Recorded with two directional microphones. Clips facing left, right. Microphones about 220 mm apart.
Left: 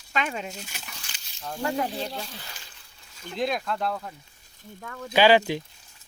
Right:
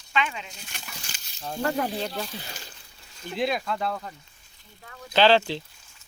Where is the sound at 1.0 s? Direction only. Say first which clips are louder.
Right 2 dB; 40° right (ahead or behind).